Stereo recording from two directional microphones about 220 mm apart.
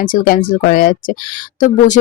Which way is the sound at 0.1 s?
40° left (ahead or behind).